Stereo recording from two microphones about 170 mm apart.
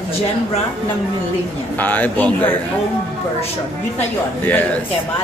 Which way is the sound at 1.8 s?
10° left (ahead or behind).